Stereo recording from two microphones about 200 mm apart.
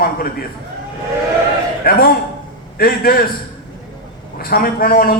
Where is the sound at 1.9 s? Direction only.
50° left (ahead or behind).